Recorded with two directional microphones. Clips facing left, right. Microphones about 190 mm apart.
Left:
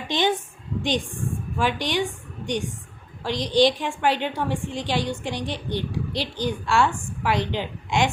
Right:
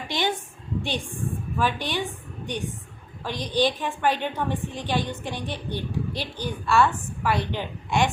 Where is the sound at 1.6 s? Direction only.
15° left (ahead or behind).